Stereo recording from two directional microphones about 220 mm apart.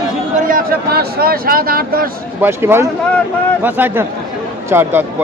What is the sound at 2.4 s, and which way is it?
Speech, 10° right (ahead or behind).